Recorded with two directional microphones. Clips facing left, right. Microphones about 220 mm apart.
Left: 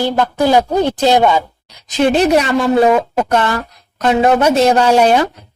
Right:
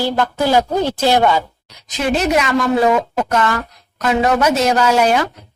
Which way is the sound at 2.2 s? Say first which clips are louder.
Left 4 dB; 35° left (ahead or behind).